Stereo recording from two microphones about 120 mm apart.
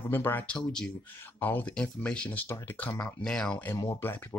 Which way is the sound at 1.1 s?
15° left (ahead or behind).